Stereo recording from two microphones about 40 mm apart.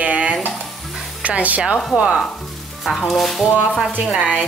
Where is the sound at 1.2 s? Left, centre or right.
Right.